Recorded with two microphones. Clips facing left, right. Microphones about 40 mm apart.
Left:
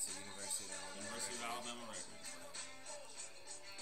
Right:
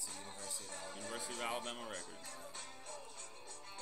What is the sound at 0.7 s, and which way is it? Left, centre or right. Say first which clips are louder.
Music: right 4 dB; centre.